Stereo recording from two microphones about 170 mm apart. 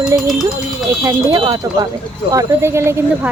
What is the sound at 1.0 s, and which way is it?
Speech, 20° right (ahead or behind).